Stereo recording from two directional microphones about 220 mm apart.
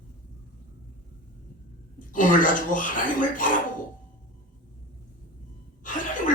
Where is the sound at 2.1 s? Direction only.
35° left (ahead or behind).